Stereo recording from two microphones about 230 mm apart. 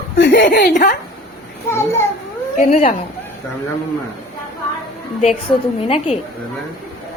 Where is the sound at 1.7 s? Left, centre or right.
Centre.